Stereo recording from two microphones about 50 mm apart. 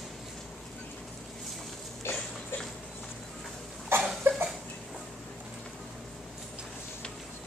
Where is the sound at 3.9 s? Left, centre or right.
Right.